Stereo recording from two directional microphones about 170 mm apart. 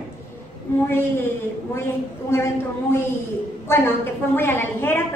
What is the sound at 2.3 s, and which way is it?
Speech, 15° left (ahead or behind).